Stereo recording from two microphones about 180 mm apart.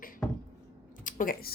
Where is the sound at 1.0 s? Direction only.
50° left (ahead or behind).